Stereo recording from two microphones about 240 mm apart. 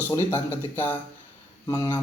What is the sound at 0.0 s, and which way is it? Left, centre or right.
A man's voice, centre.